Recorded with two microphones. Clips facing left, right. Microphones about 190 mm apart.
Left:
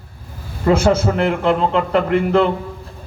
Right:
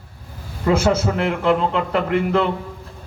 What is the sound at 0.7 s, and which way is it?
A man's voice, 60° left (ahead or behind).